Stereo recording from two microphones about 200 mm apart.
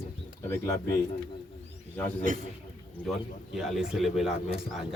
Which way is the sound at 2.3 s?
40° right (ahead or behind).